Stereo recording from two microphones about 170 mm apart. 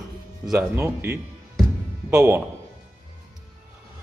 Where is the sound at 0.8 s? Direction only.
15° right (ahead or behind).